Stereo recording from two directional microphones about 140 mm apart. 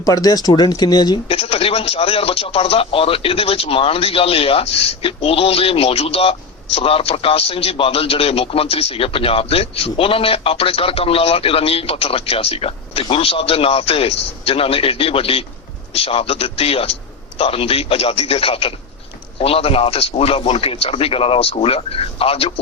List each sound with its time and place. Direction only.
0.0 s speech: 25° left (ahead or behind)
1.3 s a man's voice: 45° left (ahead or behind)